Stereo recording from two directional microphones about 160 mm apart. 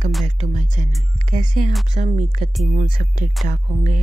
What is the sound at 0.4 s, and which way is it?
Music, 50° right (ahead or behind).